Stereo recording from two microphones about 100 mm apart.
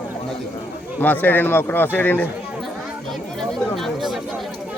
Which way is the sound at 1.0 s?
20° left (ahead or behind).